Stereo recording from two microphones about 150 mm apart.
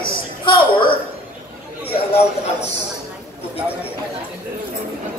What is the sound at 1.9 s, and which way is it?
Speech, 40° left (ahead or behind).